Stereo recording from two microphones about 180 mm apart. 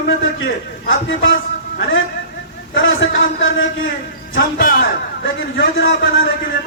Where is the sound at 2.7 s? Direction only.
90° left.